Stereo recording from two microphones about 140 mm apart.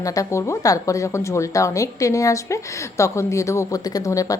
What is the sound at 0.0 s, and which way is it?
A woman's voice, 25° left (ahead or behind).